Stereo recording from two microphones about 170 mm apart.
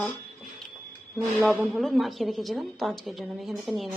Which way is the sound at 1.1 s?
Centre (ahead or behind).